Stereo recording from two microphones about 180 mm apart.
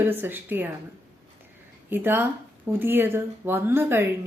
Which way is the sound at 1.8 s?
10° right (ahead or behind).